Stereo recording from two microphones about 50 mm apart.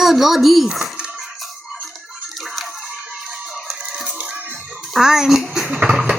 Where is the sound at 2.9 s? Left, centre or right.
Centre.